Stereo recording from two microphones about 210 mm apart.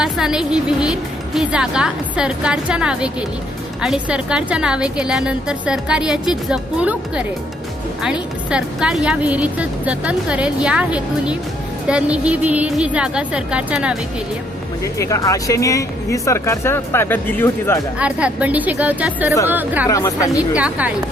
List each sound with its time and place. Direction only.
0.0 s a woman's voice: 5° right (ahead or behind)
14.9 s speech: 15° left (ahead or behind)
18.0 s a woman's voice: 5° right (ahead or behind)
19.9 s speech: 15° left (ahead or behind)
20.6 s a woman's voice: 5° right (ahead or behind)